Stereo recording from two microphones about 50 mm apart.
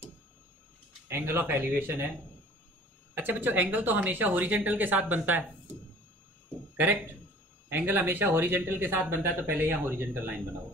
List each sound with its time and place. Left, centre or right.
1.0 s speech: right
3.2 s speech: right
7.7 s speech: right